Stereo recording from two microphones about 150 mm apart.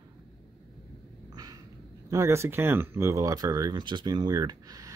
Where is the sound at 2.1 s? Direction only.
20° right (ahead or behind).